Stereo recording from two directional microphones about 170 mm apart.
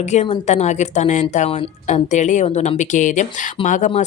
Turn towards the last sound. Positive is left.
turn(degrees=45)  # may be behind; listen again after turning